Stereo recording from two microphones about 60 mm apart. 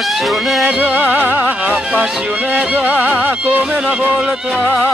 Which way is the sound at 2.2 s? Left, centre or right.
Right.